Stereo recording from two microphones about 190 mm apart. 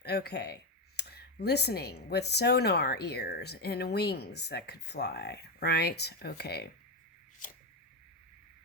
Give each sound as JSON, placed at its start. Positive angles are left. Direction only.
{"t": 0.0, "sound": "speech", "side_deg": 55}